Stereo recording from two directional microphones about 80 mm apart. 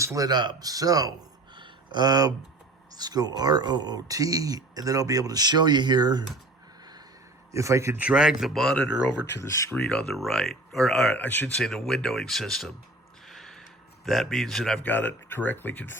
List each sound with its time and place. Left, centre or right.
0.0 s speech: right
0.3 s speech: right
1.5 s a sound: right
2.9 s speech: right
7.5 s a man's voice: right
7.9 s speech: centre
9.4 s speech: left
9.9 s speech: centre
11.2 s speech: left
11.6 s speech: centre
13.2 s a sound: centre
14.8 s speech: left